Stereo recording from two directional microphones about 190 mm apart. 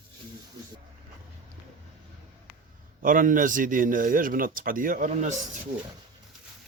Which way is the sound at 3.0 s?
45° right (ahead or behind).